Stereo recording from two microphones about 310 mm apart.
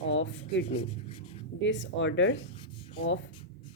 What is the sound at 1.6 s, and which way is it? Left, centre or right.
Speech, left.